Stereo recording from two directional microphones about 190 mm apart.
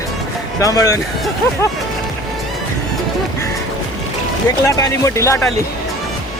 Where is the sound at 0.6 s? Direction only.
15° left (ahead or behind).